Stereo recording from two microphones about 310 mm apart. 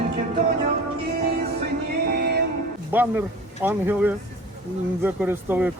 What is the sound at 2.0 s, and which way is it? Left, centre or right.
Music, right.